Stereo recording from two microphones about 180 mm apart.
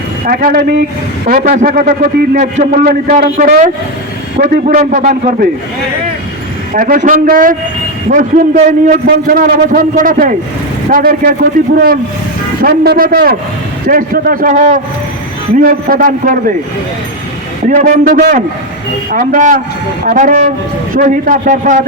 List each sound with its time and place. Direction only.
0.3 s a man's voice: 55° right (ahead or behind)
1.3 s a man's voice: 50° right (ahead or behind)
4.6 s a man's voice: 45° right (ahead or behind)
6.7 s a man's voice: 50° right (ahead or behind)
9.0 s a man's voice: 55° right (ahead or behind)
17.7 s a man's voice: 50° right (ahead or behind)